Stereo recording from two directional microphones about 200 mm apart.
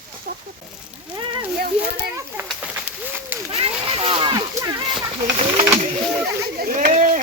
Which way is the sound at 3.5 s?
30° right (ahead or behind).